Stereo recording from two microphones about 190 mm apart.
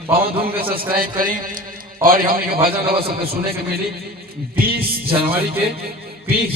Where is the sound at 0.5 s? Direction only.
50° right (ahead or behind).